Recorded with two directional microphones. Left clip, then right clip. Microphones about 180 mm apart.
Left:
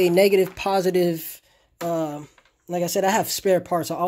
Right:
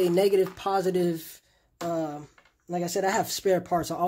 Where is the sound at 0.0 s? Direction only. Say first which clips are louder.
Left 5 dB; 30° left (ahead or behind).